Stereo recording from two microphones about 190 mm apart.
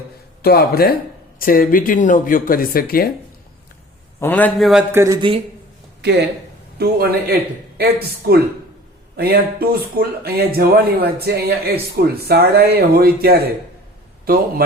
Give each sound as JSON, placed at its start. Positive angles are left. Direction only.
{"t": 0.4, "sound": "speech", "side_deg": 55}
{"t": 4.2, "sound": "a man's voice", "side_deg": 10}
{"t": 6.0, "sound": "speech", "side_deg": -65}